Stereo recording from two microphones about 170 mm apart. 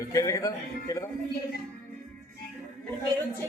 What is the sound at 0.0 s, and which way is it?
A man's voice, 20° left (ahead or behind).